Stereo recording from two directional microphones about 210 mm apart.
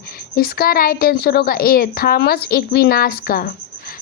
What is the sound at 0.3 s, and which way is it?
Speech, 45° left (ahead or behind).